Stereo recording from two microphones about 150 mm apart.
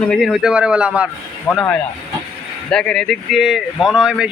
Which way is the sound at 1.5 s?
20° left (ahead or behind).